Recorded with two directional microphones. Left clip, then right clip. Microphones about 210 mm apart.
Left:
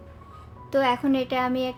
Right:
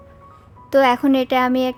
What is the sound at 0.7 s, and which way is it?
A woman's voice, 40° right (ahead or behind).